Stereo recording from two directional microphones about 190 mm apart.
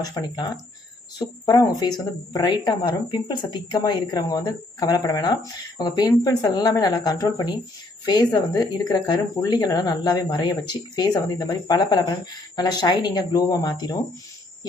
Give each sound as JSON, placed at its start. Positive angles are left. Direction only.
{"t": 0.0, "sound": "a woman's voice", "side_deg": 20}